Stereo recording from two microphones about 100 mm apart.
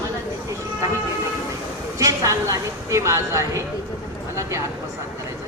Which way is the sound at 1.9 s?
35° right (ahead or behind).